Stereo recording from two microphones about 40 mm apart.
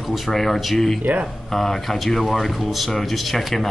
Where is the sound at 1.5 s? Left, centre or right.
Centre.